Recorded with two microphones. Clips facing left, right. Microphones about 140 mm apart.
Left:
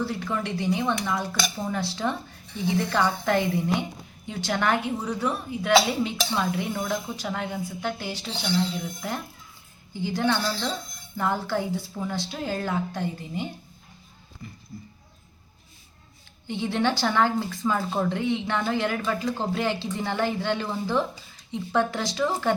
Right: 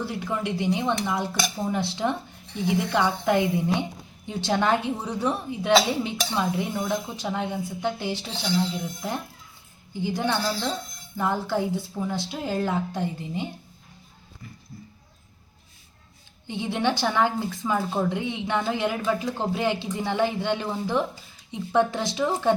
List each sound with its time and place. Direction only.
0.0 s a woman's voice: 20° right (ahead or behind)
16.5 s a woman's voice: 15° right (ahead or behind)